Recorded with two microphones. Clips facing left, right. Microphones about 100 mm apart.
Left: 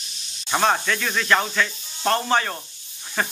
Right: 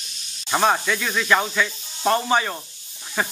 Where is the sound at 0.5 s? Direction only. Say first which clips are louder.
Right 1 dB; 5° right (ahead or behind).